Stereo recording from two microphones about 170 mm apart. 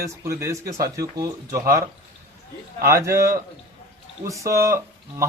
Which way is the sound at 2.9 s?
15° right (ahead or behind).